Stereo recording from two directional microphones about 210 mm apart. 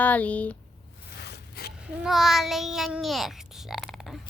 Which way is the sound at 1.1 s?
50° left (ahead or behind).